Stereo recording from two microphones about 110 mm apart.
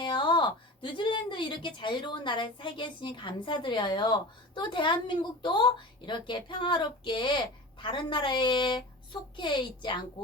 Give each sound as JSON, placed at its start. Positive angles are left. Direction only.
{"t": 0.0, "sound": "speech", "side_deg": 50}